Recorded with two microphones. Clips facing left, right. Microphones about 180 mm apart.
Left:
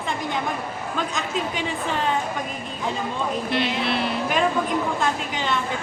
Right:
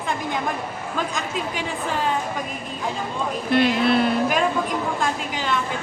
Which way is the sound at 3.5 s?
50° right (ahead or behind).